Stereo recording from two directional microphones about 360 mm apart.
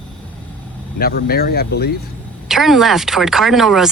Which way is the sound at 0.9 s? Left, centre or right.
Left.